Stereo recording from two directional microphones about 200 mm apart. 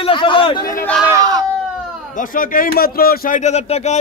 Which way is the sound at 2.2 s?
45° left (ahead or behind).